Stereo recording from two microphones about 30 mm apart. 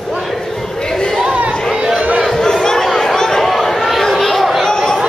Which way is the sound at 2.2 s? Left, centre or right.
Centre.